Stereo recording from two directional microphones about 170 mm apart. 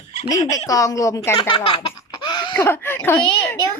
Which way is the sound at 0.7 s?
20° left (ahead or behind).